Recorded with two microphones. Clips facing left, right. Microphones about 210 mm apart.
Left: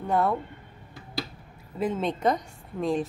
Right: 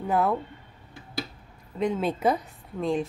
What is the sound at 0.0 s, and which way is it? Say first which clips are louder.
Speech: even; centre (ahead or behind).